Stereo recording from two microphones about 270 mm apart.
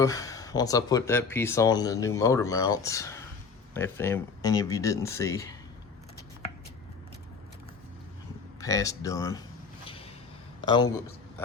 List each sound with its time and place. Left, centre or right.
0.0 s speech: centre
8.6 s speech: centre
9.8 s a sound: centre
10.7 s a man's voice: centre